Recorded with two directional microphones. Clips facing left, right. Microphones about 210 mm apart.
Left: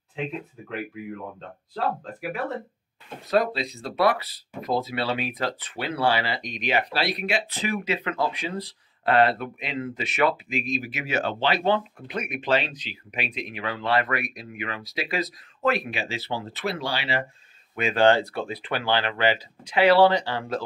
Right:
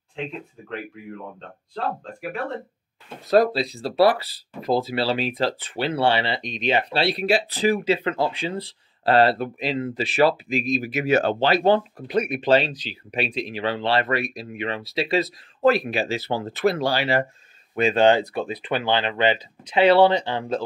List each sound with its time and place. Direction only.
0.1 s speech: 5° left (ahead or behind)
3.3 s speech: 35° right (ahead or behind)
17.7 s speech: 30° right (ahead or behind)
18.0 s speech: 15° right (ahead or behind)